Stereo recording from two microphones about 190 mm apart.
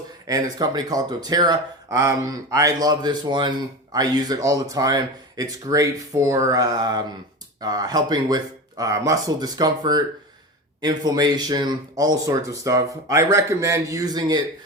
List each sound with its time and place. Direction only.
0.3 s speech: 20° right (ahead or behind)